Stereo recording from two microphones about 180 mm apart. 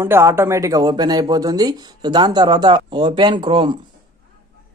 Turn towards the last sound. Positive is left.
turn(degrees=-25)  # may be behind; listen again after turning